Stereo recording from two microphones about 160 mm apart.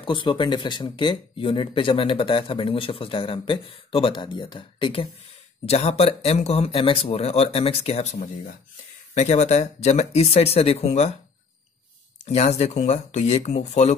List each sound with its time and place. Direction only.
0.0 s speech: 30° left (ahead or behind)
12.3 s speech: 40° left (ahead or behind)